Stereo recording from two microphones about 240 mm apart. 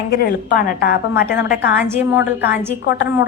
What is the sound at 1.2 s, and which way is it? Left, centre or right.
A woman's voice, centre.